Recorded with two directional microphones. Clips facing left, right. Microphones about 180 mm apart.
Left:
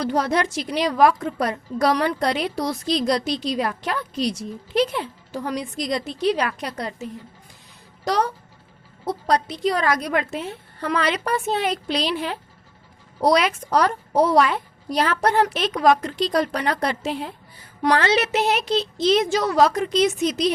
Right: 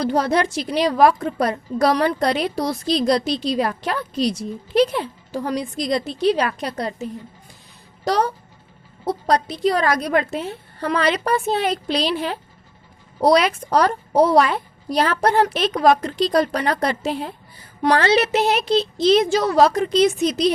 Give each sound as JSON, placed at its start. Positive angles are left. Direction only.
{"t": 0.0, "sound": "a woman's voice", "side_deg": -30}
{"t": 8.0, "sound": "a woman's voice", "side_deg": -35}